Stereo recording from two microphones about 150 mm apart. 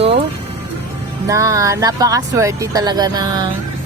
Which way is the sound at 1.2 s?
20° right (ahead or behind).